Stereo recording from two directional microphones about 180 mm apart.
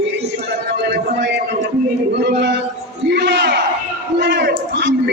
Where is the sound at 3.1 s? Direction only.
70° right (ahead or behind).